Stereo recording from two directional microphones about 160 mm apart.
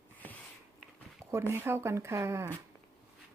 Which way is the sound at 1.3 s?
15° right (ahead or behind).